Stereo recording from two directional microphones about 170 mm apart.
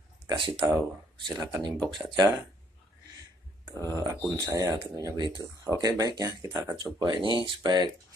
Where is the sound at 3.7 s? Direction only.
15° left (ahead or behind).